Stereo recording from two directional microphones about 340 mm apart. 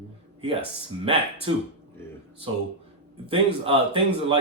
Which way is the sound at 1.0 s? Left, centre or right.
Centre.